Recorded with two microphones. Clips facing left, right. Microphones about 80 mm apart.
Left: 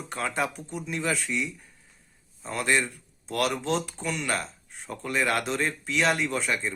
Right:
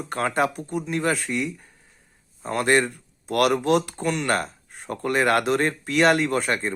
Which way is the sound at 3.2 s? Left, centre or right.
Right.